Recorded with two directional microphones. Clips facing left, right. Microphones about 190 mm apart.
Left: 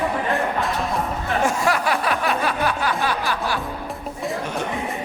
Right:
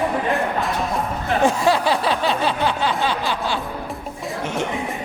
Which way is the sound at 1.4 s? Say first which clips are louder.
Right 4 dB; 30° right (ahead or behind).